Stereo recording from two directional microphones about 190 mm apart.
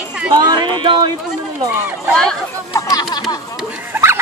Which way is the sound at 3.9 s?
15° right (ahead or behind).